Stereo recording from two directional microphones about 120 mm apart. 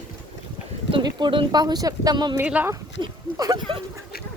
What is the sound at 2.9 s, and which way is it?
Speech, 35° right (ahead or behind).